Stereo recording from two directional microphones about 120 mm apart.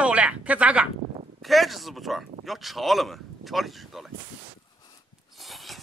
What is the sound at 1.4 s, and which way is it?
Speech, centre (ahead or behind).